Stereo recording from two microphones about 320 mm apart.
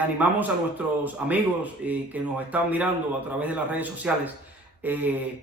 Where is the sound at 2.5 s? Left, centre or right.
Centre.